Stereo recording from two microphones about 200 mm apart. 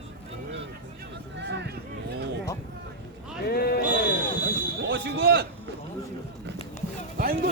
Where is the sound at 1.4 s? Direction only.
60° right (ahead or behind).